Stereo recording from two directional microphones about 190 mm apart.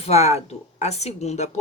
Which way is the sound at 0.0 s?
35° left (ahead or behind).